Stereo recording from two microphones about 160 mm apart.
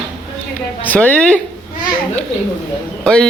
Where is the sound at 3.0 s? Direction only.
5° left (ahead or behind).